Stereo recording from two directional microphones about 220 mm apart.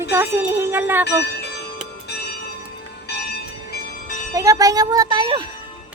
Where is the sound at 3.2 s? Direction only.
45° left (ahead or behind).